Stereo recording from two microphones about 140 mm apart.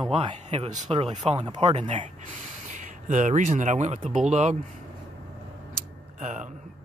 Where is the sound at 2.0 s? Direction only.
60° right (ahead or behind).